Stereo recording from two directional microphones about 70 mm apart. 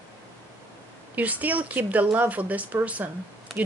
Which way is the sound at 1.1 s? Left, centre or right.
Right.